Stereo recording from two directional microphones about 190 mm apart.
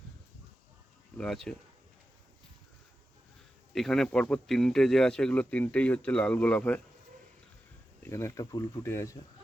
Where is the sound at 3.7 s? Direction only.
Centre (ahead or behind).